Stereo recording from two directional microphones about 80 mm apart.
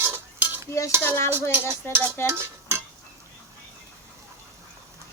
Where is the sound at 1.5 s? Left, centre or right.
Right.